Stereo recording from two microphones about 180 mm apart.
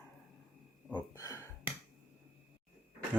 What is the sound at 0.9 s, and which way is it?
Speech, 20° left (ahead or behind).